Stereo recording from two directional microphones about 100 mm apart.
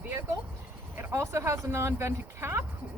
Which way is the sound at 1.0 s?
25° right (ahead or behind).